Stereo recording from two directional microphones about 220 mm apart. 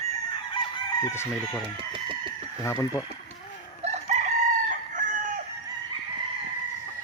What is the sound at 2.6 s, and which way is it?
Speech, 15° left (ahead or behind).